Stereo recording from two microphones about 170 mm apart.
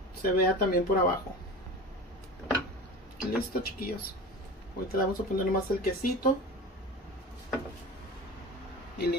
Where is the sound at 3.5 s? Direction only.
60° left (ahead or behind).